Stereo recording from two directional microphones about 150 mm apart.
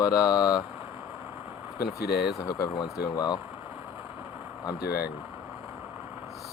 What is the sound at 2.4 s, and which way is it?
Speech, 25° left (ahead or behind).